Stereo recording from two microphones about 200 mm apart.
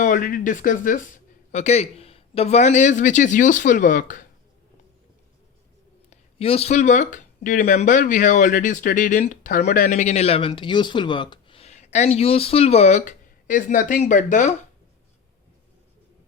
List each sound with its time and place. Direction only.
0.0 s speech: 45° left (ahead or behind)
6.1 s speech: 30° left (ahead or behind)